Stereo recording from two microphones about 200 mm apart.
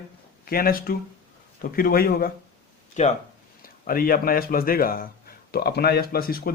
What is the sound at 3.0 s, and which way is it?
Speech, 35° left (ahead or behind).